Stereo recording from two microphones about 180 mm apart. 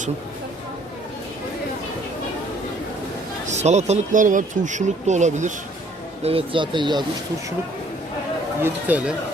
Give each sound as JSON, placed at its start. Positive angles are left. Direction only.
{"t": 3.5, "sound": "speech", "side_deg": -40}
{"t": 6.2, "sound": "speech", "side_deg": -30}
{"t": 8.6, "sound": "speech", "side_deg": -10}